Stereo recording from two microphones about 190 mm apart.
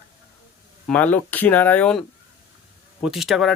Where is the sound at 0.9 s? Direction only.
10° left (ahead or behind).